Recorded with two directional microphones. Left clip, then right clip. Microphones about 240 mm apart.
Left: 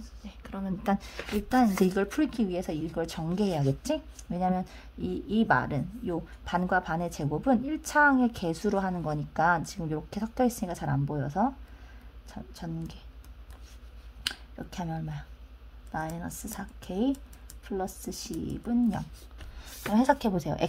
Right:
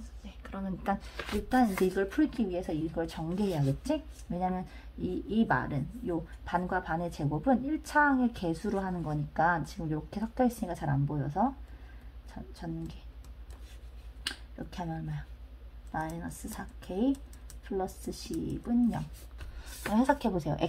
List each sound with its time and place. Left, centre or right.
0.4 s speech: left
14.2 s a woman's voice: left